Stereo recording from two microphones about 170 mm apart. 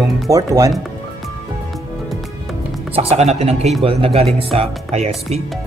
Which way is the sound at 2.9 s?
35° right (ahead or behind).